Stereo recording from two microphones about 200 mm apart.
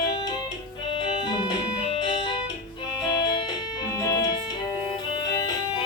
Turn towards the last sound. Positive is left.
turn(degrees=15)  # may be behind; listen again after turning